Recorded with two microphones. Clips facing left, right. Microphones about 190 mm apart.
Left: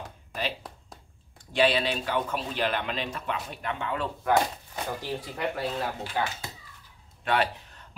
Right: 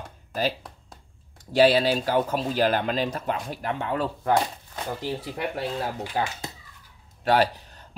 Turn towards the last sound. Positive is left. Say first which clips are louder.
# right 5 dB
turn(degrees=-35)  # may be behind; listen again after turning